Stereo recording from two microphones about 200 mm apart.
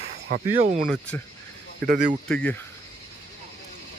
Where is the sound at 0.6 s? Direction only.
40° right (ahead or behind).